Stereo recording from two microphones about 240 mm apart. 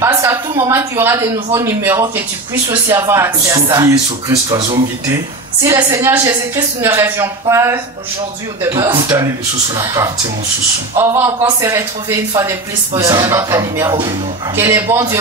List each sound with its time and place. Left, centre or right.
0.0 s speech: centre